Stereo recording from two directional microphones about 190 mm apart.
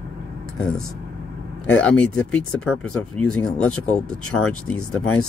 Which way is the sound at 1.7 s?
5° left (ahead or behind).